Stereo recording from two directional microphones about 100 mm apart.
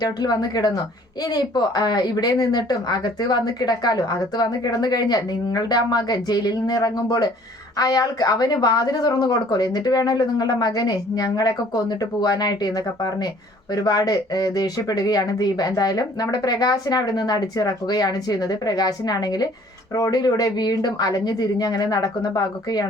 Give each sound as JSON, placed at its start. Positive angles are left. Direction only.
{"t": 0.0, "sound": "a woman's voice", "side_deg": 40}